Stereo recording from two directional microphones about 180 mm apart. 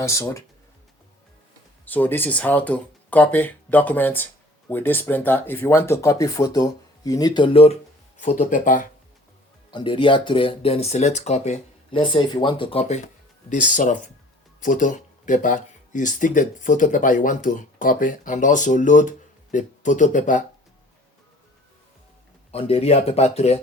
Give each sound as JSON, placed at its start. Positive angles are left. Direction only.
{"t": 0.0, "sound": "speech", "side_deg": 15}
{"t": 1.8, "sound": "speech", "side_deg": 10}
{"t": 8.2, "sound": "speech", "side_deg": 45}
{"t": 9.7, "sound": "speech", "side_deg": 30}
{"t": 11.9, "sound": "speech", "side_deg": 25}
{"t": 22.5, "sound": "speech", "side_deg": 35}